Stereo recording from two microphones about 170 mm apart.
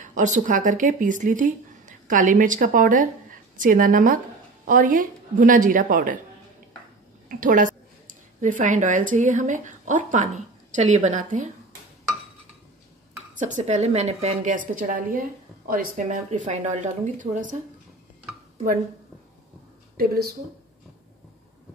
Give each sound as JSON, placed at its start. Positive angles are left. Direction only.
{"t": 0.0, "sound": "a woman's voice", "side_deg": -45}
{"t": 7.2, "sound": "a woman's voice", "side_deg": -55}
{"t": 13.3, "sound": "a woman's voice", "side_deg": -50}